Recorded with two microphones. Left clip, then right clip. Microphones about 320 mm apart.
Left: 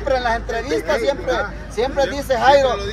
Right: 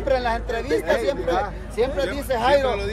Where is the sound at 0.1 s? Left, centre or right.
Left.